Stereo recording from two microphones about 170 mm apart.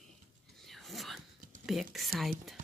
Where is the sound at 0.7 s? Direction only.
Centre (ahead or behind).